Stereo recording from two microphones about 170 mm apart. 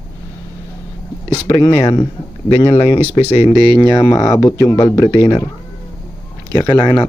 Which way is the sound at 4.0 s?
20° left (ahead or behind).